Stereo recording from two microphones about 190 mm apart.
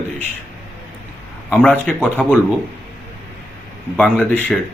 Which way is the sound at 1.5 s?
10° left (ahead or behind).